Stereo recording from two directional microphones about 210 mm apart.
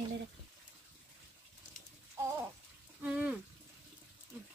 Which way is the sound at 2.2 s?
15° right (ahead or behind).